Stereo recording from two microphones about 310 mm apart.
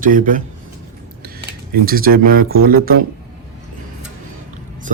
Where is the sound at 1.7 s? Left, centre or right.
Right.